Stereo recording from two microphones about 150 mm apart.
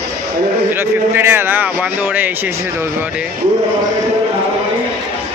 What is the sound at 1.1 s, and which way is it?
Speech, 15° right (ahead or behind).